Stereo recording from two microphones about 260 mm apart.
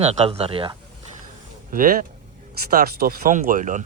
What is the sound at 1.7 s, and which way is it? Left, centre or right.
Speech, right.